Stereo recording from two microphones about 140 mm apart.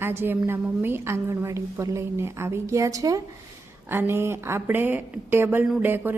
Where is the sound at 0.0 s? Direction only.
15° right (ahead or behind).